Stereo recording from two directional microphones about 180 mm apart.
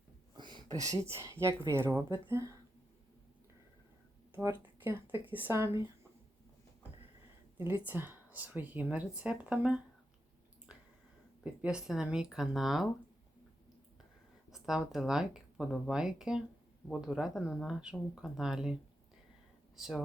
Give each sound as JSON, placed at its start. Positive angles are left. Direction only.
{"t": 0.3, "sound": "speech", "side_deg": -25}
{"t": 4.4, "sound": "speech", "side_deg": -10}
{"t": 7.6, "sound": "speech", "side_deg": -10}
{"t": 11.6, "sound": "speech", "side_deg": -5}
{"t": 14.5, "sound": "speech", "side_deg": 0}
{"t": 19.8, "sound": "speech", "side_deg": 5}